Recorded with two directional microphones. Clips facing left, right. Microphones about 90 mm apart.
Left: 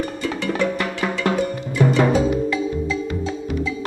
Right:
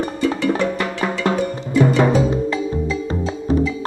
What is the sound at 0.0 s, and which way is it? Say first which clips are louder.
Music: right 5 dB; 30° right (ahead or behind).